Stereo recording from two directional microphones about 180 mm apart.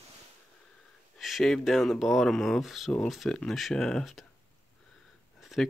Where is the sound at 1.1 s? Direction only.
Centre (ahead or behind).